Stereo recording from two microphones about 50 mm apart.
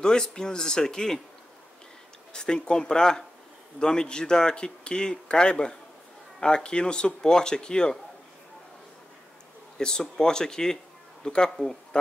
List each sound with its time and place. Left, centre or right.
0.0 s speech: centre
2.3 s speech: centre
9.8 s speech: centre